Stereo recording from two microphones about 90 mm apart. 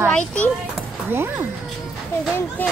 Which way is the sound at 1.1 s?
25° right (ahead or behind).